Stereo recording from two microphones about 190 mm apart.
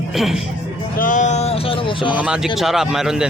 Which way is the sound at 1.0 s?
45° left (ahead or behind).